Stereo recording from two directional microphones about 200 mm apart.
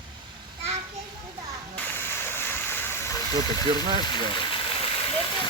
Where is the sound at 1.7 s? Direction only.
10° left (ahead or behind).